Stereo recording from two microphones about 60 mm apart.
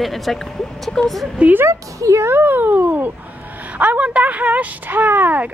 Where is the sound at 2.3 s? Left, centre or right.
Right.